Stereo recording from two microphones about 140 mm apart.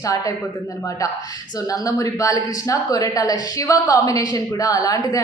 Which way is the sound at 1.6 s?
25° left (ahead or behind).